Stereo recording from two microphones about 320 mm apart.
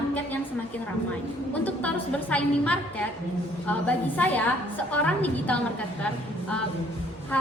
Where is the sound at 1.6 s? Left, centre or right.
Centre.